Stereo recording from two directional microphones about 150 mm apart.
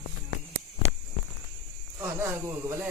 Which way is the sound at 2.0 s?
15° right (ahead or behind).